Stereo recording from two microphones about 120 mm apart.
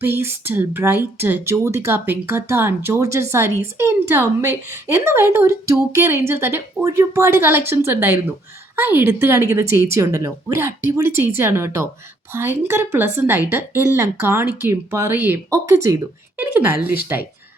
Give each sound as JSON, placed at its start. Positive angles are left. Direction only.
{"t": 0.0, "sound": "a woman's voice", "side_deg": -20}